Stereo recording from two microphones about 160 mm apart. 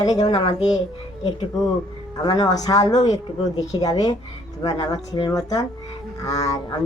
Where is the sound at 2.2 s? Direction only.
25° left (ahead or behind).